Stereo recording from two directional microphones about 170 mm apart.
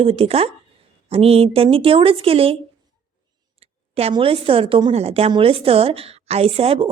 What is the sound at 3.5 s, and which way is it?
A woman's voice, 35° right (ahead or behind).